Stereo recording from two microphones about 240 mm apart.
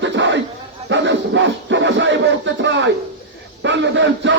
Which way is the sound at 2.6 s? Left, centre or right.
Right.